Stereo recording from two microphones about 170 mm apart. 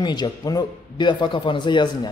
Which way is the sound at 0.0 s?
25° left (ahead or behind).